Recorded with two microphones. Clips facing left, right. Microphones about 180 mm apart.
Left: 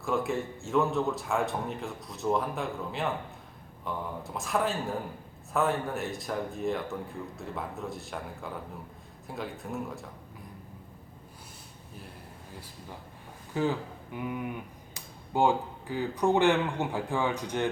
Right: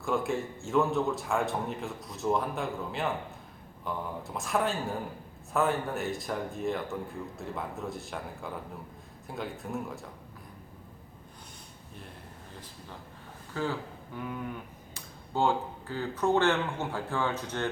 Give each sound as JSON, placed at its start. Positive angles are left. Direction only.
{"t": 0.0, "sound": "speech", "side_deg": 0}
{"t": 13.5, "sound": "speech", "side_deg": 15}